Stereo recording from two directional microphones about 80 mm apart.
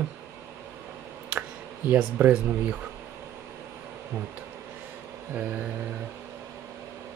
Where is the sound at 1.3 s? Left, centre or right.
Centre.